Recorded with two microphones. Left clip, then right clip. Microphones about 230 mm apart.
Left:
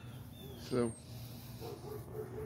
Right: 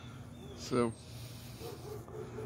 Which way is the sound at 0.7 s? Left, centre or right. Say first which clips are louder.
Right 3 dB; centre.